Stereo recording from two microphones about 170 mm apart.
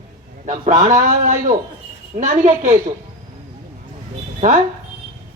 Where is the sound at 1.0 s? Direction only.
50° right (ahead or behind).